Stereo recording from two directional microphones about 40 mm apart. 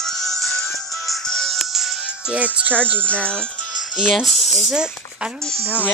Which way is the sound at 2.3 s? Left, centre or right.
Right.